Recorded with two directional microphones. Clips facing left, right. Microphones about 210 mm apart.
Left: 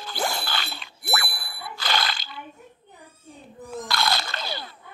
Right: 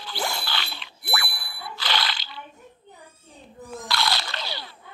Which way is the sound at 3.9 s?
50° left (ahead or behind).